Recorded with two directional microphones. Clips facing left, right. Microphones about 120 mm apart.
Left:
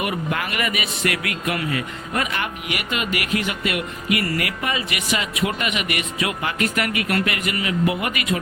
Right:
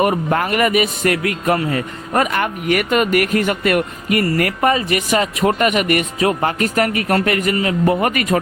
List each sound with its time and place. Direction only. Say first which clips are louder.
0.0 s a man's voice: right 8 dB; 40° right (ahead or behind)